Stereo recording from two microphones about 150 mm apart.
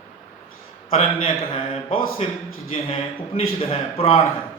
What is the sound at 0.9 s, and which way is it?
A man's voice, 40° left (ahead or behind).